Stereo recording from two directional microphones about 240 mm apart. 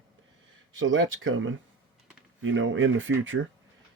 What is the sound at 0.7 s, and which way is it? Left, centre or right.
Speech, right.